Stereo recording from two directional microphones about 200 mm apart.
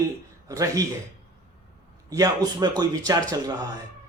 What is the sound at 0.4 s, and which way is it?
Speech, 15° right (ahead or behind).